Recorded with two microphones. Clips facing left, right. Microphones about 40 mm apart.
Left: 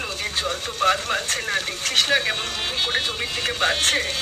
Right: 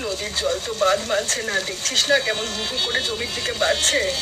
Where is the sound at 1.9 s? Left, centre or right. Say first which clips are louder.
Right 1 dB; left.